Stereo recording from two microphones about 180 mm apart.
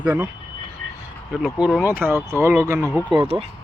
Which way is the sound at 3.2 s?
35° right (ahead or behind).